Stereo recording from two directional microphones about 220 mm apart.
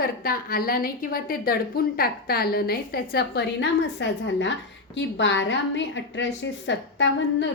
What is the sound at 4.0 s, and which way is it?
A woman's voice, 55° left (ahead or behind).